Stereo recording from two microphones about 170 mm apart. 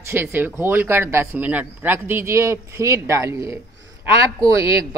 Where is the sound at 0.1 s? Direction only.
15° right (ahead or behind).